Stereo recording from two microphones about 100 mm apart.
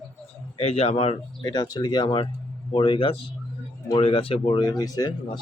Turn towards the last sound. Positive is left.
turn(degrees=40)  # may be behind; listen again after turning